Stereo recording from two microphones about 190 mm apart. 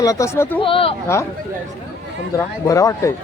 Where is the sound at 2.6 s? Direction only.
15° left (ahead or behind).